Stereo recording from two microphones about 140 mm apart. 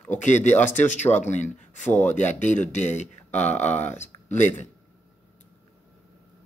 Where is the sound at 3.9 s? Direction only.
55° left (ahead or behind).